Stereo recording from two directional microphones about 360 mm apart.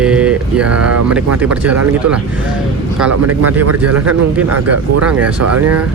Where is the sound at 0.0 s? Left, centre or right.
Centre.